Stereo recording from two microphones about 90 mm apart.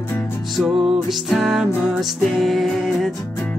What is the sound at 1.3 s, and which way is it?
Music, 5° right (ahead or behind).